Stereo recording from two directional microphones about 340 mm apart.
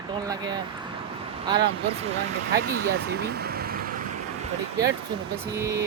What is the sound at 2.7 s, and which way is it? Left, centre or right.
Speech, right.